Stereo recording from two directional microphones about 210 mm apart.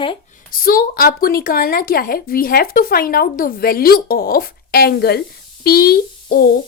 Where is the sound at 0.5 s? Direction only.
45° left (ahead or behind).